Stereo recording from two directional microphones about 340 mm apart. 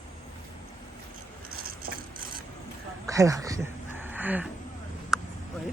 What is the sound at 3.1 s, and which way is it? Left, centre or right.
Speech, centre.